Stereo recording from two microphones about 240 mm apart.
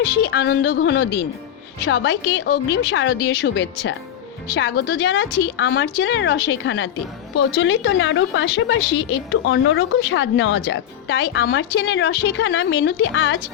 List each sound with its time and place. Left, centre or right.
0.2 s a woman's voice: left